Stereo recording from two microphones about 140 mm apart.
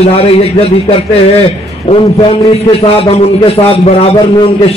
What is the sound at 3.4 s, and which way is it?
Speech, 45° left (ahead or behind).